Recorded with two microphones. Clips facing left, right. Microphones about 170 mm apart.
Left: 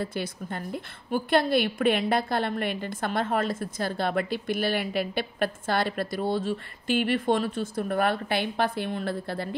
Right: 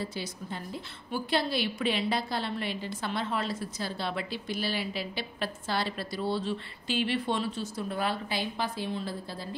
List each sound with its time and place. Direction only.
0.0 s a woman's voice: 55° left (ahead or behind)